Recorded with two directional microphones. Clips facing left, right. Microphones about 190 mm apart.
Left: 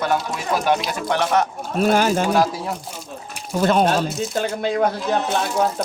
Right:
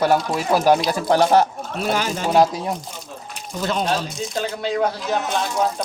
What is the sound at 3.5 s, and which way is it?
Speech, 55° left (ahead or behind).